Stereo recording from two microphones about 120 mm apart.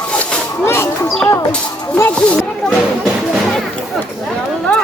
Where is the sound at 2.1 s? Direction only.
5° left (ahead or behind).